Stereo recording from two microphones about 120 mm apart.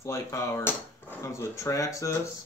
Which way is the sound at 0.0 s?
25° left (ahead or behind).